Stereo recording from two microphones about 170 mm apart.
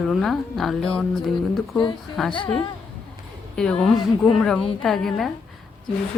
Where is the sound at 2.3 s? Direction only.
30° left (ahead or behind).